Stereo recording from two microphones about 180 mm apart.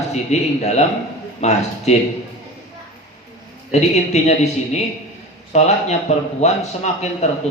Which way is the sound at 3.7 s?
40° left (ahead or behind).